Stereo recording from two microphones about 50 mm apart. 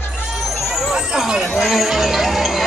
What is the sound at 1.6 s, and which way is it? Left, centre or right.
Music, centre.